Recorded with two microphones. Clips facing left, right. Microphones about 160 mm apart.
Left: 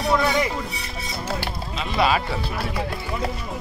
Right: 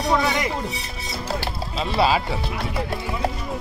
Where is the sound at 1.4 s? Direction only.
30° right (ahead or behind).